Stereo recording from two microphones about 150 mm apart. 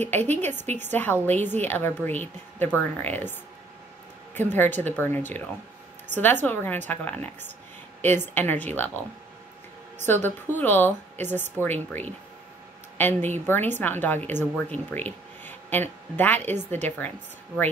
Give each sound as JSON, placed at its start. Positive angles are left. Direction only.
{"t": 0.0, "sound": "speech", "side_deg": 10}
{"t": 10.2, "sound": "a woman's voice", "side_deg": 10}
{"t": 16.5, "sound": "a woman's voice", "side_deg": -50}